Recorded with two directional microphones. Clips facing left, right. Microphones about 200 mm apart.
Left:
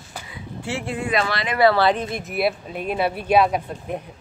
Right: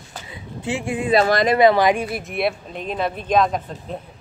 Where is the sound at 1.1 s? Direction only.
40° right (ahead or behind).